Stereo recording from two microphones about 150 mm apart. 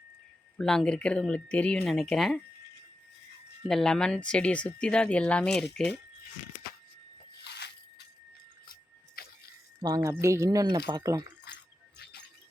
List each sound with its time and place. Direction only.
0.6 s speech: 5° left (ahead or behind)
3.7 s speech: 5° left (ahead or behind)
7.5 s biting: 90° left
8.6 s music: 75° left (ahead or behind)
9.8 s speech: 25° right (ahead or behind)
11.5 s music: 90° left